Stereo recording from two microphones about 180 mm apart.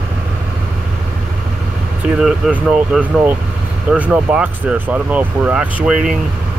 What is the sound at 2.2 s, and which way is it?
Speech, 5° right (ahead or behind).